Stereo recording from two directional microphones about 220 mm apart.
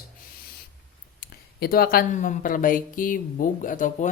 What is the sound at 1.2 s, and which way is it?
Speech, 45° left (ahead or behind).